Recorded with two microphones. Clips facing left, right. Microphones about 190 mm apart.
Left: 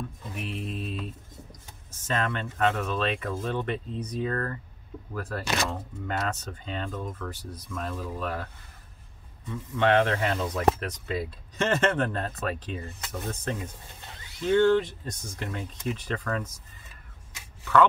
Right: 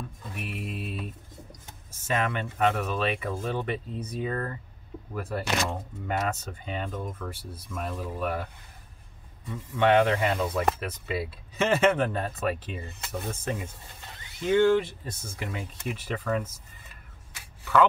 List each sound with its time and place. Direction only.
0.3 s mantra: 5° right (ahead or behind)
2.0 s speech: 10° right (ahead or behind)
9.5 s speech: 5° right (ahead or behind)